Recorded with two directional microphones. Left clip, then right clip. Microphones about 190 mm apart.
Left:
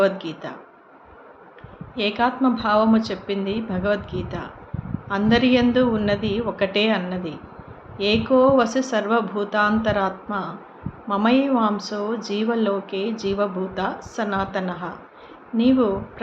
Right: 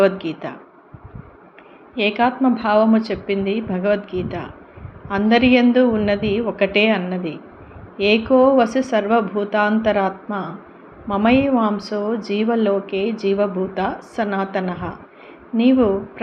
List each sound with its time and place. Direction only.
0.0 s a woman's voice: 15° right (ahead or behind)
2.0 s a woman's voice: 10° right (ahead or behind)